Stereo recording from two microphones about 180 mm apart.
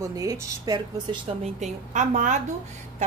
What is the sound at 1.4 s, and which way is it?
A woman's voice, 40° right (ahead or behind).